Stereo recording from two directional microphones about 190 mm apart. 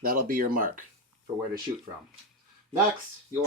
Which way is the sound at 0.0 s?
50° right (ahead or behind).